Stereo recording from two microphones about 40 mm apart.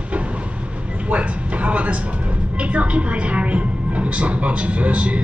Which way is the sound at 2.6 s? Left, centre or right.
Right.